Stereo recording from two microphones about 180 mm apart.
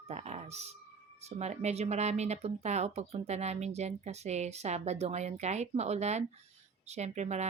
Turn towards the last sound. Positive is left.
turn(degrees=-40)  # may be behind; listen again after turning